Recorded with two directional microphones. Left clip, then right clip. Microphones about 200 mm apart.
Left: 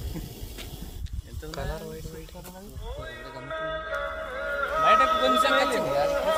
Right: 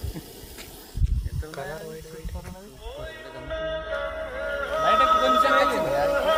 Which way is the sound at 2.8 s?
25° right (ahead or behind).